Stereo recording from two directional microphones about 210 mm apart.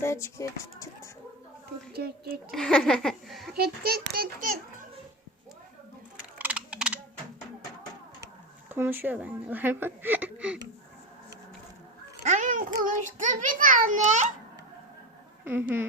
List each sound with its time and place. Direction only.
0.0 s speech: 15° left (ahead or behind)
1.9 s a child's voice: 45° right (ahead or behind)
2.5 s speech: 5° left (ahead or behind)
3.6 s a child's voice: 45° right (ahead or behind)
6.4 s typing: 5° right (ahead or behind)
8.7 s speech: 10° right (ahead or behind)
12.2 s a child's voice: 35° right (ahead or behind)
15.4 s speech: 10° right (ahead or behind)